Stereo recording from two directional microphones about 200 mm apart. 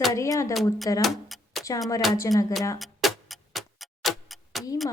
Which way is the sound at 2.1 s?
15° left (ahead or behind).